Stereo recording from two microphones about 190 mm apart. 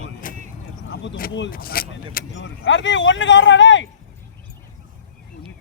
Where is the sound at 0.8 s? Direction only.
80° left.